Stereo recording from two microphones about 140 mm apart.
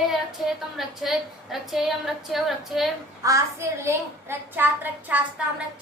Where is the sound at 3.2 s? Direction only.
20° right (ahead or behind).